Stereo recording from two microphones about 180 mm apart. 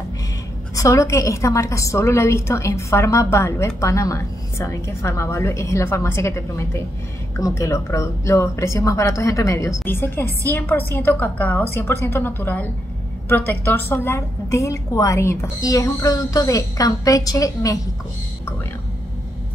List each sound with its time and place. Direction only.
0.7 s a woman's voice: 15° left (ahead or behind)